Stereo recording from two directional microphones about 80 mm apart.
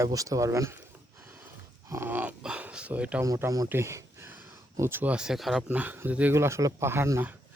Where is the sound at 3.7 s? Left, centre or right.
Right.